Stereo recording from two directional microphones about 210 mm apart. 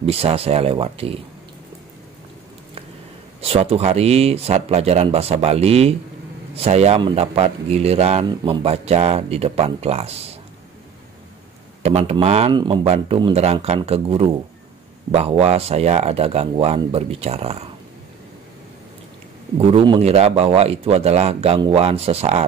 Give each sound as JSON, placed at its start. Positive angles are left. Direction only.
{"t": 0.0, "sound": "speech", "side_deg": -30}
{"t": 3.3, "sound": "speech", "side_deg": -30}
{"t": 11.8, "sound": "speech", "side_deg": -30}
{"t": 19.7, "sound": "speech", "side_deg": -25}